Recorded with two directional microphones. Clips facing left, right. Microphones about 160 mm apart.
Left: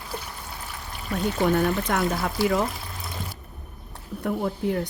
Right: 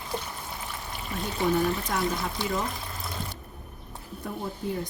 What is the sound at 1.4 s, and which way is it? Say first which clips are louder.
Speech: left 2 dB; 70° left (ahead or behind).